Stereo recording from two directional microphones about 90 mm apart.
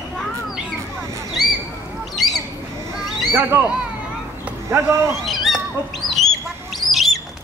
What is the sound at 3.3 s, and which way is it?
Speech, 25° right (ahead or behind).